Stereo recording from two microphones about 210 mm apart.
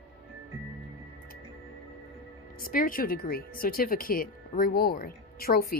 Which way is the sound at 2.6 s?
40° left (ahead or behind).